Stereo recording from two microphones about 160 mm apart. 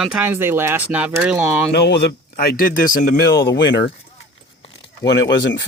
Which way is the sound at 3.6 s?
90° left.